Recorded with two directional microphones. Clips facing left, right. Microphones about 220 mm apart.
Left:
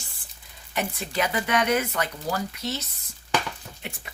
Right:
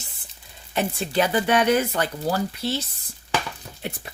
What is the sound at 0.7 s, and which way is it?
Speech, 30° right (ahead or behind).